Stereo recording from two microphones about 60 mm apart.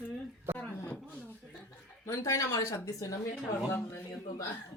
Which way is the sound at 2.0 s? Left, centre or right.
Left.